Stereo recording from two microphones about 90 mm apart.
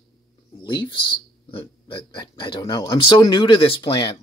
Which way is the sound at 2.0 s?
55° left (ahead or behind).